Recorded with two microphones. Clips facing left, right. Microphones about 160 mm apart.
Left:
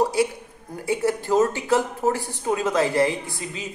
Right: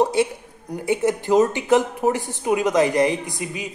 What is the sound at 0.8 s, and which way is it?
Speech, 20° right (ahead or behind).